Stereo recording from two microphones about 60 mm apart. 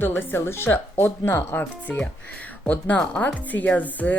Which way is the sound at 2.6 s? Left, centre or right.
Left.